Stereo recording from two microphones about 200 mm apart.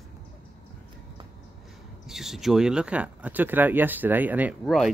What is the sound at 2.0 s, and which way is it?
Speech, centre (ahead or behind).